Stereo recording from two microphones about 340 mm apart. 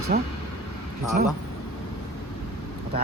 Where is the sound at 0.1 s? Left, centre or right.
Right.